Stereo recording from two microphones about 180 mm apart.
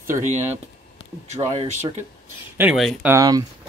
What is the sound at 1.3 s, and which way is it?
Speech, 40° right (ahead or behind).